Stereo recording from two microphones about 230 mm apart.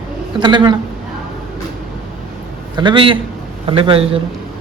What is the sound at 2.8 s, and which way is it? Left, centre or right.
Speech, right.